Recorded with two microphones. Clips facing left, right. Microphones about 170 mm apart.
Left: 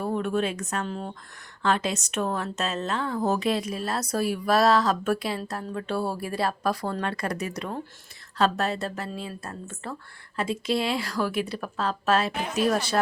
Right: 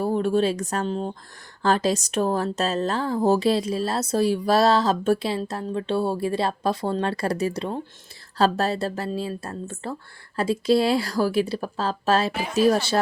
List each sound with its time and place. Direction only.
0.0 s speech: 30° right (ahead or behind)